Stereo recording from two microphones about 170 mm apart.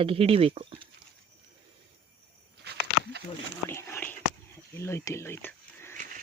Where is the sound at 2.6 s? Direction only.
75° right (ahead or behind).